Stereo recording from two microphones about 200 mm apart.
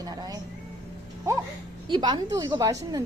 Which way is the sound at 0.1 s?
20° right (ahead or behind).